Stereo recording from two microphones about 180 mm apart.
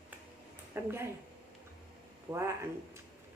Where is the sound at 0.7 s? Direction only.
15° right (ahead or behind).